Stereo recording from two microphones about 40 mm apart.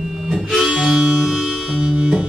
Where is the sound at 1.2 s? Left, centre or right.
Centre.